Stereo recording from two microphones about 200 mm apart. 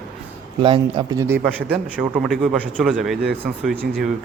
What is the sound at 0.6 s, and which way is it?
Speech, 25° right (ahead or behind).